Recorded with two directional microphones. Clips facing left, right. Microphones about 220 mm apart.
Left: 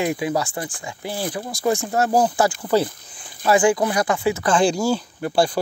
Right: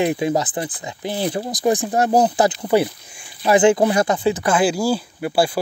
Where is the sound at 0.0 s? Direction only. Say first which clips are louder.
Right 3 dB; 20° right (ahead or behind).